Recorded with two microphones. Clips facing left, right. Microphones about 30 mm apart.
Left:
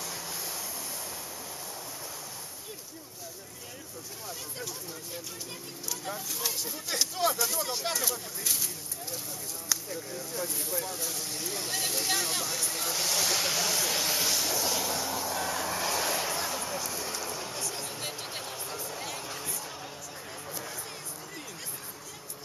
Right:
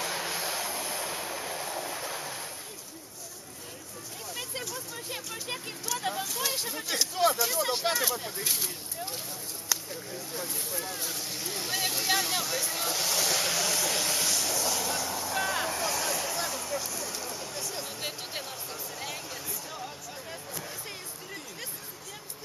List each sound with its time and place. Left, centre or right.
0.0 s train: right
5.1 s speech: right
7.0 s speech: centre
9.7 s speech: centre
15.3 s vehicle: centre
15.7 s vehicle: centre
16.3 s a sound: centre
17.6 s a sound: centre
18.4 s music: centre
19.2 s a sound: centre